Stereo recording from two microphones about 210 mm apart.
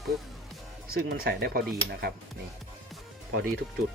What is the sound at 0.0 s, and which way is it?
Music, centre (ahead or behind).